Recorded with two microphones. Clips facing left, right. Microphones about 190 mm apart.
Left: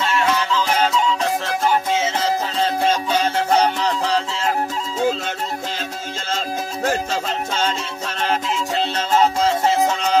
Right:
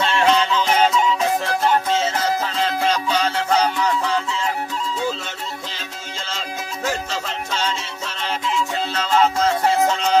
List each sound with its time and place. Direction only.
0.2 s music: 25° right (ahead or behind)
0.7 s music: 10° right (ahead or behind)
1.6 s music: 10° left (ahead or behind)
2.6 s music: 50° left (ahead or behind)
6.8 s music: 50° left (ahead or behind)
9.1 s music: 20° left (ahead or behind)
9.7 s music: centre (ahead or behind)